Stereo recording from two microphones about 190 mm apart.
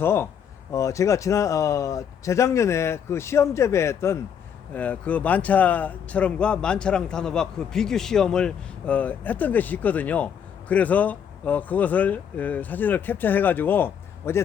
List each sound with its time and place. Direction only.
0.0 s a man's voice: 10° left (ahead or behind)